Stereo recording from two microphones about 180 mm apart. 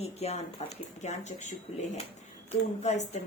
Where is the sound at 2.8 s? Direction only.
40° left (ahead or behind).